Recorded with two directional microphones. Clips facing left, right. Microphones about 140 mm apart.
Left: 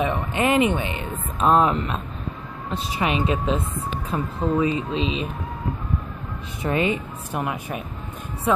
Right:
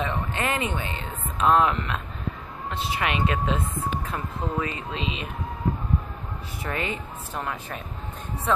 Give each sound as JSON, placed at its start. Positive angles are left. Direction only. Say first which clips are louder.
{"t": 0.0, "sound": "a woman's voice", "louder": "left 5 dB", "side_deg": 15}
{"t": 1.5, "sound": "speech", "louder": "left 2 dB", "side_deg": 30}
{"t": 3.0, "sound": "speech", "louder": "left 4 dB", "side_deg": 25}
{"t": 6.6, "sound": "a woman's voice", "louder": "left 8 dB", "side_deg": 20}